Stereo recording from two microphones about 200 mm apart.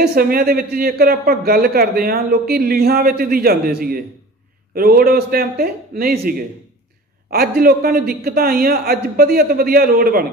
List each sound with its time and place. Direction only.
0.0 s a man's voice: 50° right (ahead or behind)